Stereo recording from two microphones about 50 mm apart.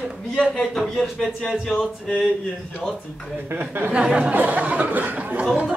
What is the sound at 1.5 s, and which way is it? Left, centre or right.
Music, centre.